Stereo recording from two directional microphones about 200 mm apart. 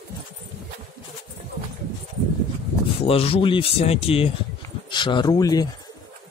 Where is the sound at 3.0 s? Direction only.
30° left (ahead or behind).